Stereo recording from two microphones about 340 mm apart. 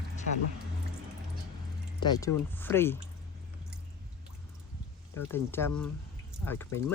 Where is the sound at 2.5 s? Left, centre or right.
Centre.